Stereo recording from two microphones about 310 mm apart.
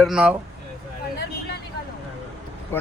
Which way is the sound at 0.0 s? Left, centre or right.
Centre.